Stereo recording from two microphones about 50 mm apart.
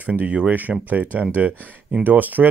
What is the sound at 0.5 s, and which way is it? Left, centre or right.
Speech, right.